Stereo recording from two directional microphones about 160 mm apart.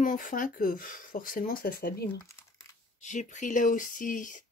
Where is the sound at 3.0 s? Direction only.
50° left (ahead or behind).